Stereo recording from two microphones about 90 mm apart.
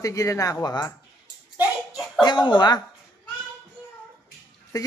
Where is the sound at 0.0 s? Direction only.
35° left (ahead or behind).